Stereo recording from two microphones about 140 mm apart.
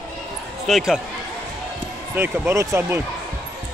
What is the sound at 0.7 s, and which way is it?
Speech, 5° right (ahead or behind).